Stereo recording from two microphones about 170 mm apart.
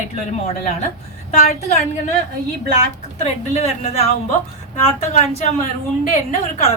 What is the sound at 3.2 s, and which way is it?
A woman's voice, 40° left (ahead or behind).